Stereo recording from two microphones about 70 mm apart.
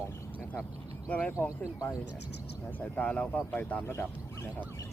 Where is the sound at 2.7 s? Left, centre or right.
Left.